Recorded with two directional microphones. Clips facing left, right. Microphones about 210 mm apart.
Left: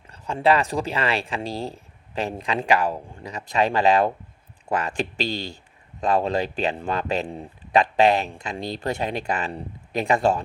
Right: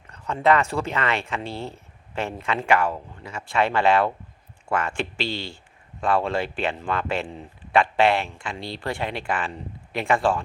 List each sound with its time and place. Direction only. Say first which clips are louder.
0.1 s speech: even; 30° left (ahead or behind)